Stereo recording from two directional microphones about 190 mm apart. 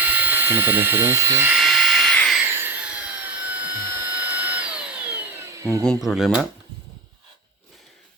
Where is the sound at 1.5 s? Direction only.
Centre (ahead or behind).